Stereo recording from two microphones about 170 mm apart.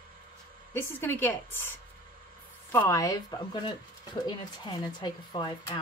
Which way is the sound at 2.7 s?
15° left (ahead or behind).